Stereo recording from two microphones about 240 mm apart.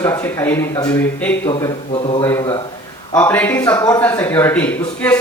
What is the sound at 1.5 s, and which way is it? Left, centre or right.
A man's voice, left.